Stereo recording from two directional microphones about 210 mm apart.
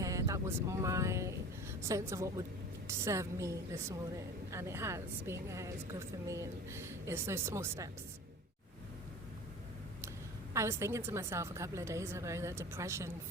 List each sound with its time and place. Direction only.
0.0 s a woman's voice: 15° right (ahead or behind)
10.5 s a woman's voice: 15° right (ahead or behind)